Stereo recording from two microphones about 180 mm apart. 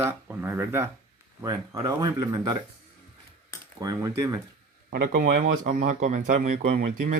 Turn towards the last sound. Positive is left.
turn(degrees=-40)  # may be behind; listen again after turning